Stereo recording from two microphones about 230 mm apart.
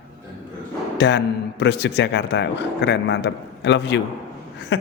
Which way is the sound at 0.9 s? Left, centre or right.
Left.